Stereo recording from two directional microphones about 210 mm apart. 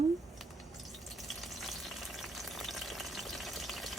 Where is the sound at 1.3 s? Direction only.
Centre (ahead or behind).